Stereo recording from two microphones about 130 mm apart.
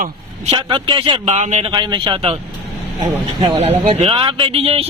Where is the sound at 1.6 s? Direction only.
35° right (ahead or behind).